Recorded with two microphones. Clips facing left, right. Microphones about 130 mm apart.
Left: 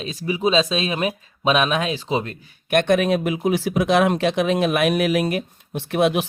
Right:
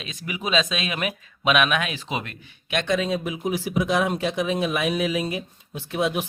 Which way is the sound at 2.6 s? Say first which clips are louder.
Left 6 dB; 55° left (ahead or behind).